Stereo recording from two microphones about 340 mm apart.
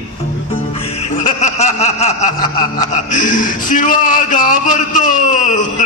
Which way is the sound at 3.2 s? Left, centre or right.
Left.